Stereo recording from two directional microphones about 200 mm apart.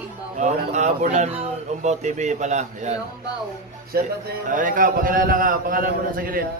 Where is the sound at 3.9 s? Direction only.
50° right (ahead or behind).